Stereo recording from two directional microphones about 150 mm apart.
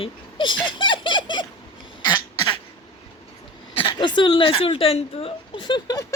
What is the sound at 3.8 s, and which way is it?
Speech, 30° left (ahead or behind).